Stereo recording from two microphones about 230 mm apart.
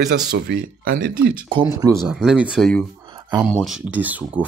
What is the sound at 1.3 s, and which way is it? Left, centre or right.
Speech, right.